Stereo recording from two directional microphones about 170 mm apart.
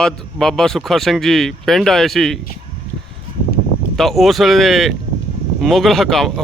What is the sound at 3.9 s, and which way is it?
Speech, centre (ahead or behind).